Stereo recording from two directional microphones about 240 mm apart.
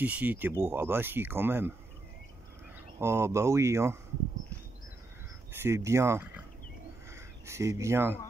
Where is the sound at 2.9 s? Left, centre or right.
Centre.